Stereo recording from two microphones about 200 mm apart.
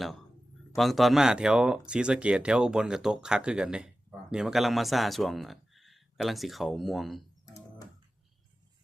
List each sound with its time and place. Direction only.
0.8 s speech: centre (ahead or behind)
7.4 s music: 15° left (ahead or behind)